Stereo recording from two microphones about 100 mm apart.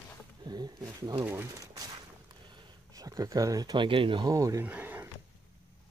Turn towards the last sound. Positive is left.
turn(degrees=-20)  # may be behind; listen again after turning